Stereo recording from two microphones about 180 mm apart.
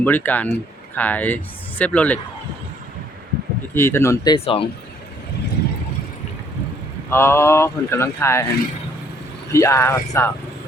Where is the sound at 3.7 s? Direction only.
15° left (ahead or behind).